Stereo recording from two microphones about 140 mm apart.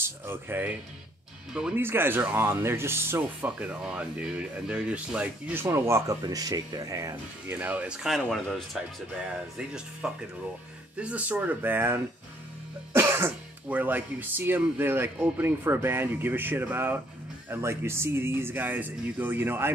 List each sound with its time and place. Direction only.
0.0 s speech: 15° right (ahead or behind)
7.5 s speech: 10° right (ahead or behind)
10.0 s speech: 5° right (ahead or behind)